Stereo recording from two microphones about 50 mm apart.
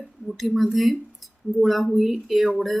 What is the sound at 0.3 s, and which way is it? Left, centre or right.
A woman's voice, centre.